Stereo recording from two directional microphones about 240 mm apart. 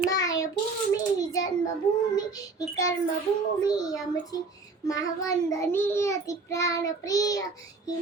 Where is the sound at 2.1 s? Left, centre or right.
Centre.